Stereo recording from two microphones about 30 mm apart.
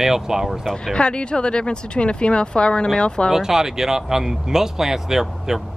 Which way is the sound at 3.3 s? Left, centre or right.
Centre.